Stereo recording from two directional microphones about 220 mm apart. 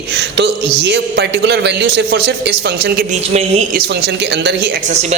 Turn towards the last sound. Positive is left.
turn(degrees=-50)  # may be behind; listen again after turning